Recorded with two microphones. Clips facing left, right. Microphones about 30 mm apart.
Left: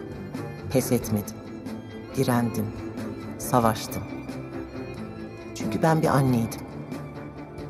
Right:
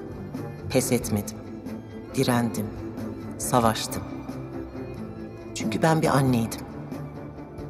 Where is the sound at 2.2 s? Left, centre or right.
Right.